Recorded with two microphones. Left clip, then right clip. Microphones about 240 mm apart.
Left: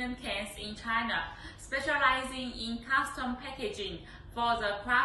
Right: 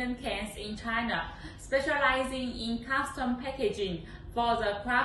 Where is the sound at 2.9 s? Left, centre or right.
Centre.